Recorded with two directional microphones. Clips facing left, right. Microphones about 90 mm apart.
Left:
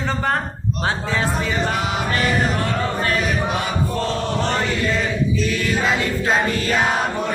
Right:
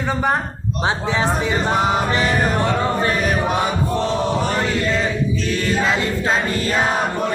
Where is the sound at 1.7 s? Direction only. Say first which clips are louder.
Right 5 dB; 35° right (ahead or behind).